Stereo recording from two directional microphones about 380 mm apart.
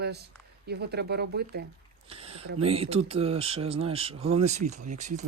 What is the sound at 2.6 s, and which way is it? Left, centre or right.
Speech, centre.